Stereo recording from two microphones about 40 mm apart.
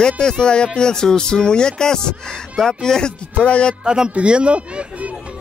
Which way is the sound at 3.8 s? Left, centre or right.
Centre.